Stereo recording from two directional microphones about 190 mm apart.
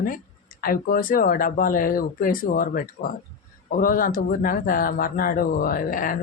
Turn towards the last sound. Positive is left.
turn(degrees=45)  # may be behind; listen again after turning